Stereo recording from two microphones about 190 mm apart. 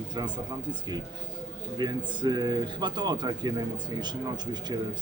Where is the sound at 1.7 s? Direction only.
25° right (ahead or behind).